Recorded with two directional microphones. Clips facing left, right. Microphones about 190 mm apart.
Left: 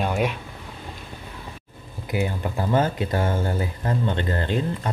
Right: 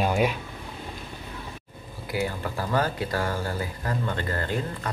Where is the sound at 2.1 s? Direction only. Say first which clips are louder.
Left 3 dB; 20° left (ahead or behind).